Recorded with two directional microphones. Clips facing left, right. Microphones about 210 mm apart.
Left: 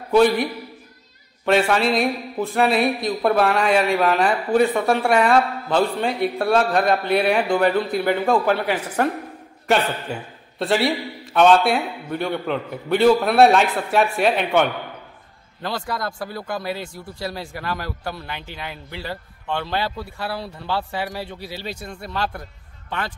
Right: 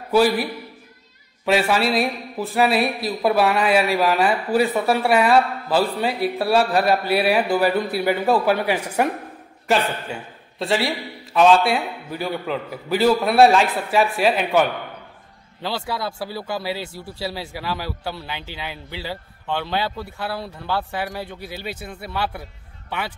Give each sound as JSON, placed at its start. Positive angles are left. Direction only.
{"t": 0.1, "sound": "speech", "side_deg": -5}
{"t": 15.6, "sound": "speech", "side_deg": -5}
{"t": 21.4, "sound": "speech", "side_deg": -55}
{"t": 21.6, "sound": "a man's voice", "side_deg": -5}